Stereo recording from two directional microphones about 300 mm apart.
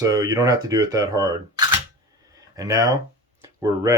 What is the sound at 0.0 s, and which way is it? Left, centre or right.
Speech, centre.